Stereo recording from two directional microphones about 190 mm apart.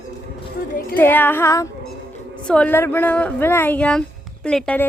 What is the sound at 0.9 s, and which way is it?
A woman's voice, 10° left (ahead or behind).